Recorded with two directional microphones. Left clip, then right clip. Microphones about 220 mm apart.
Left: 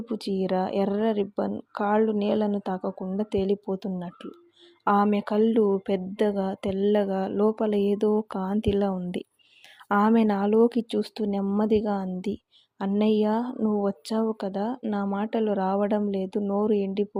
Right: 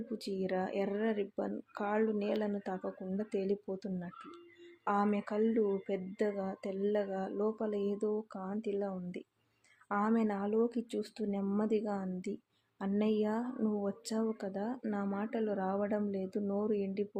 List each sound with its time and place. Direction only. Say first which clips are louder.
0.1 s speech: left 10 dB; 30° left (ahead or behind)